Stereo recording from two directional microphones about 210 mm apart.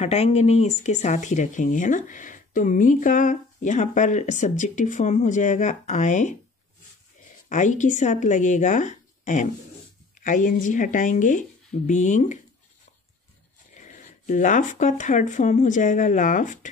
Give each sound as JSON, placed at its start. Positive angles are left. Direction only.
{"t": 0.0, "sound": "speech", "side_deg": 30}
{"t": 7.4, "sound": "speech", "side_deg": 35}
{"t": 13.7, "sound": "speech", "side_deg": 35}